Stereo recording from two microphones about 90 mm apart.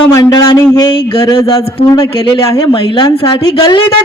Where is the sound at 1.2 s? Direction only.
40° left (ahead or behind).